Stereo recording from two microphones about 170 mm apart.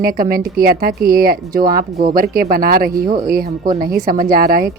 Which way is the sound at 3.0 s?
25° right (ahead or behind).